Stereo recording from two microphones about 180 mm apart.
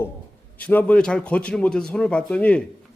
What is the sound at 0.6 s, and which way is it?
A man's voice, 10° left (ahead or behind).